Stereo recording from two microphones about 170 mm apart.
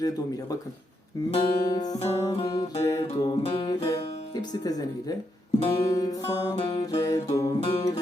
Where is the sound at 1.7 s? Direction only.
25° left (ahead or behind).